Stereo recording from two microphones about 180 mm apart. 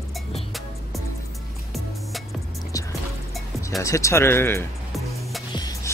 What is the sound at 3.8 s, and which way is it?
Speech, 15° left (ahead or behind).